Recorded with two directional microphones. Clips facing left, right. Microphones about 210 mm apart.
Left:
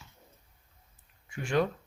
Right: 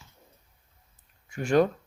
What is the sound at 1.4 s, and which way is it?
Speech, 40° right (ahead or behind).